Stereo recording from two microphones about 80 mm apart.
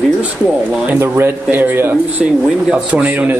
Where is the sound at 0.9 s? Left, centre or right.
Right.